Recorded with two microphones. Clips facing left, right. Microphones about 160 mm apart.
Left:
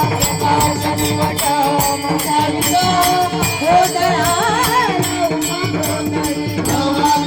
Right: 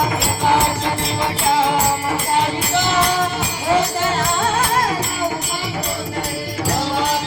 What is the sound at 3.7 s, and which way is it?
Music, 65° left (ahead or behind).